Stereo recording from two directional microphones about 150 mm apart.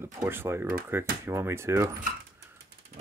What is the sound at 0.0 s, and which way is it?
Speech, 15° right (ahead or behind).